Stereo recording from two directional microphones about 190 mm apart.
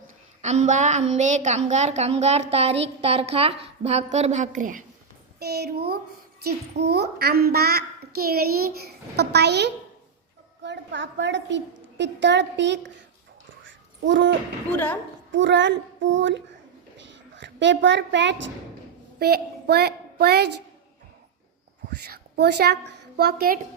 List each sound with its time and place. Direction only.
0.4 s a woman's voice: 40° right (ahead or behind)
5.4 s a child's voice: 55° right (ahead or behind)
13.7 s babbling: 75° right (ahead or behind)
14.7 s a woman's voice: 10° left (ahead or behind)
15.3 s a woman's voice: 70° right (ahead or behind)
19.2 s a woman's voice: 55° right (ahead or behind)
21.8 s a woman's voice: 60° right (ahead or behind)